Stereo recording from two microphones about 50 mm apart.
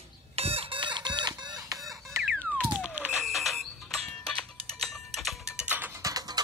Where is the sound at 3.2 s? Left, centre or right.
Centre.